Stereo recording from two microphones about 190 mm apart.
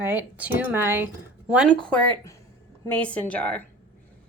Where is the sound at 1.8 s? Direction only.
5° left (ahead or behind).